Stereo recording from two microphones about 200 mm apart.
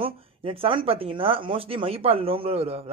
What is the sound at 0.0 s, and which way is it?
Speech, 25° right (ahead or behind).